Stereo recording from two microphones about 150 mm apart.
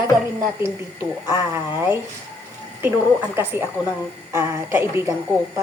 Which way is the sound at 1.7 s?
15° right (ahead or behind).